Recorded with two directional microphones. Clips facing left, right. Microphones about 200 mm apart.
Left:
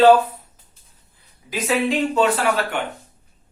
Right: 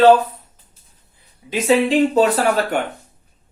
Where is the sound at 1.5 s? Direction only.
30° right (ahead or behind).